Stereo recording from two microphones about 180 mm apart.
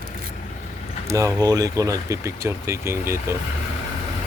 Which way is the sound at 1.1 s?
15° right (ahead or behind).